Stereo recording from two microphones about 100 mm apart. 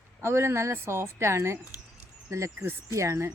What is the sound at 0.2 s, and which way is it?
A woman's voice, 25° right (ahead or behind).